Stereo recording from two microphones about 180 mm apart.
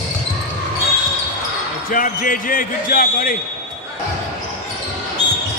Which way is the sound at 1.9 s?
50° left (ahead or behind).